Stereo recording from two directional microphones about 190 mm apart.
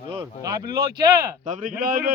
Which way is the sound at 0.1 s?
20° right (ahead or behind).